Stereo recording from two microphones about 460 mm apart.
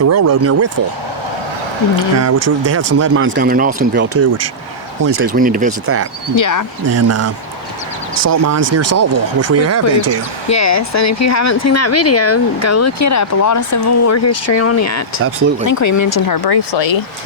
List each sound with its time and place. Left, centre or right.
0.1 s speech: right
2.1 s speech: right; by 5.7 s centre
6.3 s speech: left
6.9 s speech: right
10.5 s speech: left